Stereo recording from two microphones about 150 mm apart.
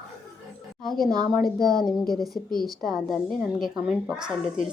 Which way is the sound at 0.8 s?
Centre (ahead or behind).